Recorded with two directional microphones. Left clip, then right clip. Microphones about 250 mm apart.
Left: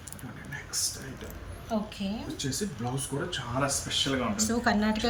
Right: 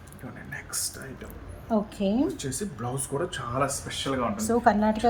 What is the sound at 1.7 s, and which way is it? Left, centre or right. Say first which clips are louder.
Speech: right 5 dB; right.